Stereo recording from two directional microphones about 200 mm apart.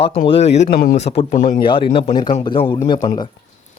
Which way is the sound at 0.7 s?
50° left (ahead or behind).